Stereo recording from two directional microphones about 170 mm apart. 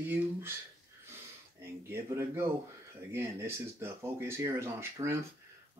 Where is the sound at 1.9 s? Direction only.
15° right (ahead or behind).